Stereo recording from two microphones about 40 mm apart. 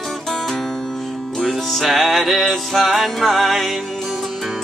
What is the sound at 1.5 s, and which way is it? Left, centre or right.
Music, centre.